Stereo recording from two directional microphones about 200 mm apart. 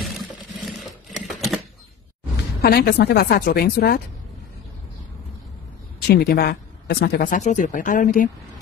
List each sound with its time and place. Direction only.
0.0 s a sound: centre (ahead or behind)
0.7 s typewriter: centre (ahead or behind)
2.6 s speech: 50° left (ahead or behind)
6.0 s speech: 50° left (ahead or behind)
7.3 s speech: 40° left (ahead or behind)